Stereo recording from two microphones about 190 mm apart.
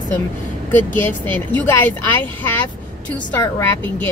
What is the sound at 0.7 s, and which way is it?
A woman's voice, 10° left (ahead or behind).